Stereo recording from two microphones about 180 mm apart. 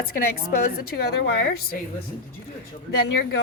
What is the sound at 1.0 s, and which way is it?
Speech, 65° left (ahead or behind).